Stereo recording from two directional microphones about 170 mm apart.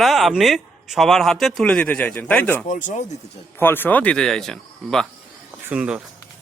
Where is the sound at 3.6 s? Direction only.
10° left (ahead or behind); by 6.0 s 5° right (ahead or behind).